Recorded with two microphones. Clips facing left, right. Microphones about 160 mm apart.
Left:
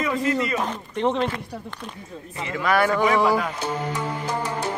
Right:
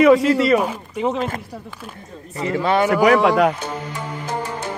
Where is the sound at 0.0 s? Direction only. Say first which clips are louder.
Right 10 dB; 80° right.